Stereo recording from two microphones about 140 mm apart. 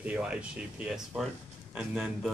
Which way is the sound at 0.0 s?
10° right (ahead or behind).